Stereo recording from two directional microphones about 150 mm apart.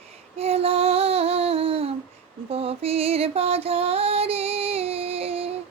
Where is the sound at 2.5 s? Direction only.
40° right (ahead or behind).